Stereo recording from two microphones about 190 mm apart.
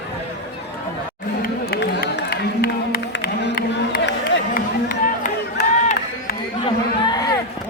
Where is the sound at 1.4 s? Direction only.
55° left (ahead or behind).